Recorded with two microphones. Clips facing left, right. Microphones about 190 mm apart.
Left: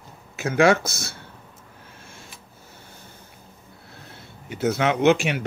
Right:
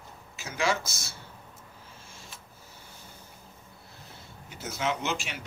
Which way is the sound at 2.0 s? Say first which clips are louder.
Left 4 dB; 60° left (ahead or behind).